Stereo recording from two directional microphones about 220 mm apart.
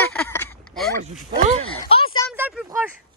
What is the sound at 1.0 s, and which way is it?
Speech, 30° right (ahead or behind).